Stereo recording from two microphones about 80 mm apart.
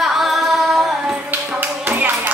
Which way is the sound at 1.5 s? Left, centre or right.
Right.